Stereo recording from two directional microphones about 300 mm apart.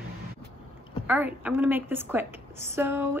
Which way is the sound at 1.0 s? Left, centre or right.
Centre.